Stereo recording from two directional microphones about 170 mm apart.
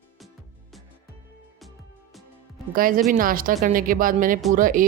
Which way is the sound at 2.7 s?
55° right (ahead or behind).